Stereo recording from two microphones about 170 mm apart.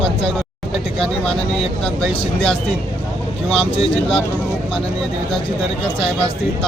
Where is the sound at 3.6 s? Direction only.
35° left (ahead or behind).